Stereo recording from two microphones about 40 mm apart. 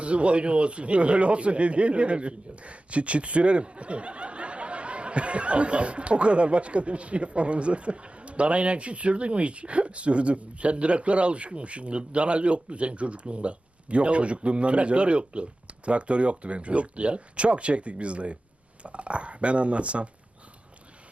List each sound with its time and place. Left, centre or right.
0.0 s speech: right